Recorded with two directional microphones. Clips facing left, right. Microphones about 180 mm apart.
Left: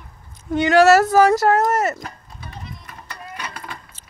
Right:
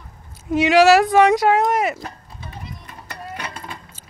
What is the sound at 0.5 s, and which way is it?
Speech, centre (ahead or behind).